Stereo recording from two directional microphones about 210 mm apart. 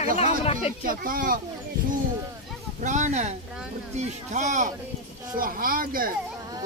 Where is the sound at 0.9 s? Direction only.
40° right (ahead or behind).